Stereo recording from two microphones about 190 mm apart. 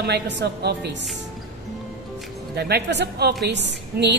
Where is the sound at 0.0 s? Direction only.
60° right (ahead or behind).